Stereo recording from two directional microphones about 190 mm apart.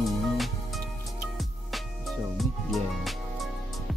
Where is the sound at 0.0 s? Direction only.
Centre (ahead or behind).